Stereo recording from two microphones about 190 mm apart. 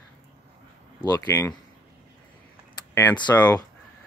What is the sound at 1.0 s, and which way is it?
Speech, 15° left (ahead or behind).